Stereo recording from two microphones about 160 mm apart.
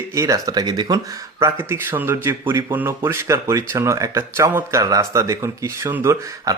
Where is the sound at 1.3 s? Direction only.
15° right (ahead or behind).